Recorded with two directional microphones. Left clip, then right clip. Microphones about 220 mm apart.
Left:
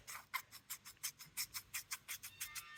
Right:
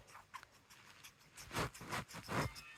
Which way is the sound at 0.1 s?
40° left (ahead or behind).